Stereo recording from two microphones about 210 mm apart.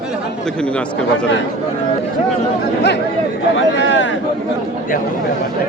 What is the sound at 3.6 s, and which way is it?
Speech, 60° left (ahead or behind).